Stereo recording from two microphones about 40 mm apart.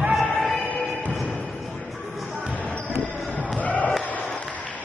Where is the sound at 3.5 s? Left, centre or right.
Left.